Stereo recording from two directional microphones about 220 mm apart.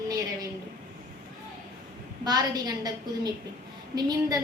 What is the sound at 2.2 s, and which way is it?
A woman's voice, 15° right (ahead or behind).